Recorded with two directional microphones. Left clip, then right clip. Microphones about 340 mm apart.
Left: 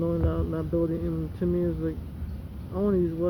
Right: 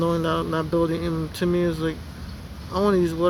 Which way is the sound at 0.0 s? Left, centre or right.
Centre.